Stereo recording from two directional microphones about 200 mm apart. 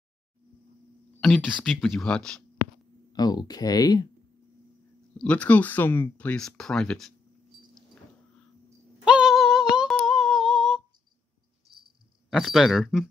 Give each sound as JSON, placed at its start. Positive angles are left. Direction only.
{"t": 1.2, "sound": "speech", "side_deg": 5}
{"t": 3.1, "sound": "speech", "side_deg": 20}
{"t": 5.1, "sound": "speech", "side_deg": 5}
{"t": 9.0, "sound": "female singing", "side_deg": -5}
{"t": 11.7, "sound": "a sound", "side_deg": -25}
{"t": 12.3, "sound": "speech", "side_deg": 0}